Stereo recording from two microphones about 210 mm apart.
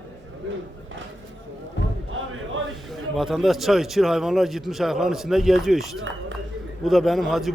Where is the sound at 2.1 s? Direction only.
70° right (ahead or behind).